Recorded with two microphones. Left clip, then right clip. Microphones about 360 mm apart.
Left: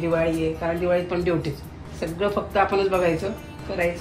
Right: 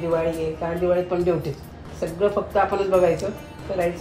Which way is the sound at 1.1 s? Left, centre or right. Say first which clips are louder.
Right 2 dB; centre.